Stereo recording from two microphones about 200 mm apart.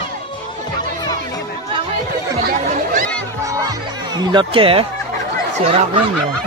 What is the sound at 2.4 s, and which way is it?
Chatter, 40° right (ahead or behind).